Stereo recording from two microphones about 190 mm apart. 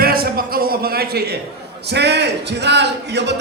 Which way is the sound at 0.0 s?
50° right (ahead or behind).